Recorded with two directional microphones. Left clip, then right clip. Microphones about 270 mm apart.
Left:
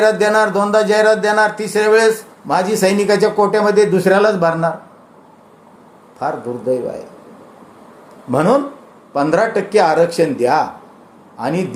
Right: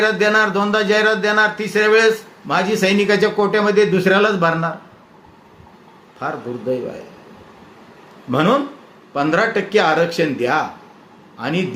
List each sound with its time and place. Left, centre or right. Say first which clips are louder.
0.2 s speech: left 2 dB; centre
3.2 s speech: left 3 dB; centre
3.5 s speech: left 2 dB; centre
6.1 s speech: left 4 dB; centre
8.3 s speech: left 2 dB; centre
11.3 s a man's voice: left 3 dB; centre